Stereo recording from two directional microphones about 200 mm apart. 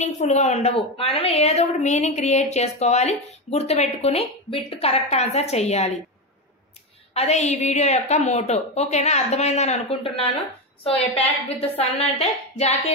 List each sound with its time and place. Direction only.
0.0 s a woman's voice: 35° left (ahead or behind)
7.2 s a woman's voice: 35° left (ahead or behind)
11.4 s a woman's voice: 30° left (ahead or behind)